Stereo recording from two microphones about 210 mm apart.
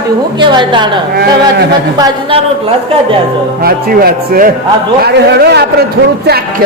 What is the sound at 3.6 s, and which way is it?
Speech, 45° right (ahead or behind).